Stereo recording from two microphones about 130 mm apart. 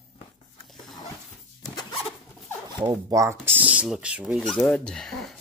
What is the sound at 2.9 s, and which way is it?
Speech, 25° right (ahead or behind).